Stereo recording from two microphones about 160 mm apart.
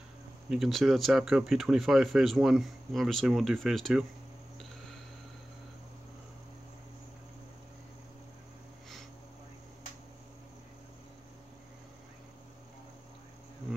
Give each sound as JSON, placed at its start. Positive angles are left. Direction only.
{"t": 0.5, "sound": "speech", "side_deg": 0}